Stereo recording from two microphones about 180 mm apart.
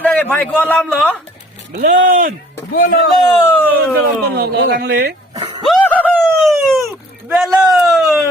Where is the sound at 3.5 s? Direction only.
10° left (ahead or behind).